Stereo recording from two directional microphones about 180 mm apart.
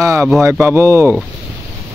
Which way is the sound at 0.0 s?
15° right (ahead or behind).